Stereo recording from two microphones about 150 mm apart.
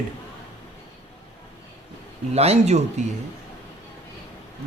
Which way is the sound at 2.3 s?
45° right (ahead or behind).